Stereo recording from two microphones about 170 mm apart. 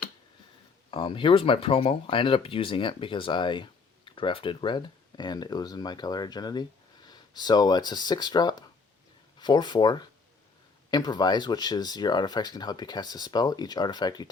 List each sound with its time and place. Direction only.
0.9 s speech: 30° left (ahead or behind)